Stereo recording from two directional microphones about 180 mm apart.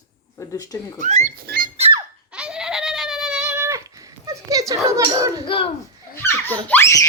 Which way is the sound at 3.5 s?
15° right (ahead or behind).